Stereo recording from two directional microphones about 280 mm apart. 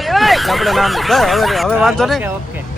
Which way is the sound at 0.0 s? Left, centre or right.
Centre.